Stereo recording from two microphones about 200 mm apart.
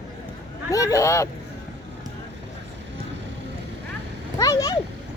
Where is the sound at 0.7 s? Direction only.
15° left (ahead or behind).